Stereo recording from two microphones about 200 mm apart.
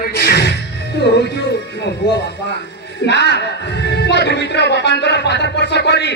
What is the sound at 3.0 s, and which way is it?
Speech, 60° left (ahead or behind).